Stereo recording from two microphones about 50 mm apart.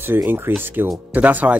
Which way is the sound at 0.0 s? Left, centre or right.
Right.